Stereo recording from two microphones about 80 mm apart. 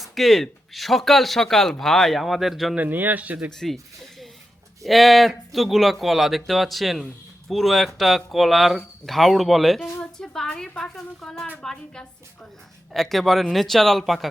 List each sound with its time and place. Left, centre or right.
0.0 s speech: centre
2.7 s speech: right
4.8 s a woman's voice: centre